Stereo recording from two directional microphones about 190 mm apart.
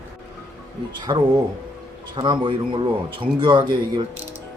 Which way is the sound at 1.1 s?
25° right (ahead or behind).